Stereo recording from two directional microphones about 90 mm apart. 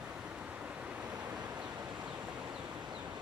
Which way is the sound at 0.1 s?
10° right (ahead or behind).